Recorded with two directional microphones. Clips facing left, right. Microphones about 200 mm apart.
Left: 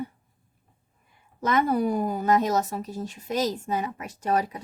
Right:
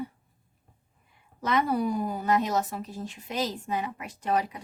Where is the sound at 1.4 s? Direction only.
45° left (ahead or behind).